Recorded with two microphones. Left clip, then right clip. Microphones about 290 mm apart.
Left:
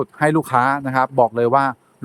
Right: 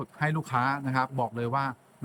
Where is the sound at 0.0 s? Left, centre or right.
Centre.